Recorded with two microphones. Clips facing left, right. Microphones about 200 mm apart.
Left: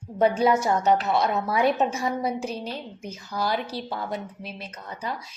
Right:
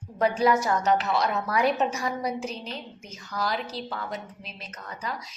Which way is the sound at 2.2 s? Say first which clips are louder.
Left 3 dB; 30° left (ahead or behind).